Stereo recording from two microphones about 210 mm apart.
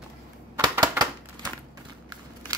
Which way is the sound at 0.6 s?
20° right (ahead or behind).